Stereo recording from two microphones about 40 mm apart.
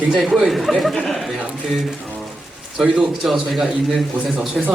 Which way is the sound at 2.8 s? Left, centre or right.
Centre.